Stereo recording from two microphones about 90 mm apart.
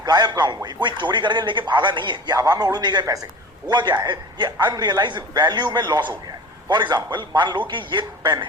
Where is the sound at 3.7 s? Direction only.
55° right (ahead or behind).